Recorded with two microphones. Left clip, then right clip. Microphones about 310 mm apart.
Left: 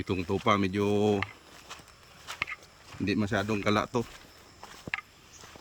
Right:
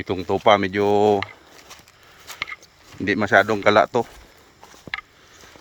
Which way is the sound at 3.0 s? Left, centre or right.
Centre.